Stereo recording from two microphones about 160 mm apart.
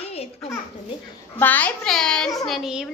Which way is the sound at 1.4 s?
10° left (ahead or behind).